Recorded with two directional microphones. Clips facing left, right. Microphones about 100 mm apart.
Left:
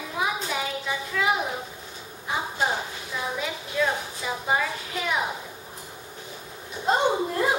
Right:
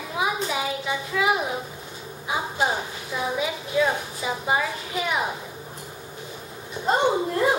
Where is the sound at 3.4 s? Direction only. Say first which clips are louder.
Right 4 dB; 5° right (ahead or behind).